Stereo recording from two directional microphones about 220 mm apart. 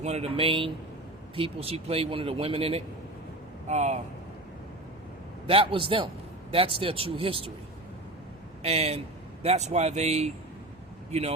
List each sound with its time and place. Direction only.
0.0 s a man's voice: 30° right (ahead or behind)
5.5 s a man's voice: 25° right (ahead or behind)
8.6 s a man's voice: 30° right (ahead or behind)